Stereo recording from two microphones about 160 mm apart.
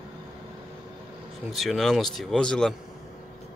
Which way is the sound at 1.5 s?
Centre (ahead or behind).